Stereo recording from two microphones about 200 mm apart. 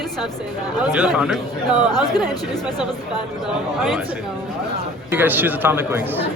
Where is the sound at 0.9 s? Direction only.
5° right (ahead or behind).